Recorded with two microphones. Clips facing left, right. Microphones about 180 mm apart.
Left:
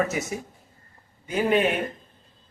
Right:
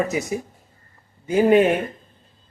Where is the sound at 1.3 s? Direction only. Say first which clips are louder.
Right 7 dB; 40° right (ahead or behind).